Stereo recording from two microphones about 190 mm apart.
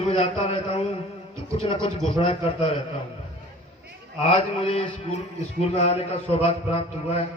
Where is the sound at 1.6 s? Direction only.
30° left (ahead or behind).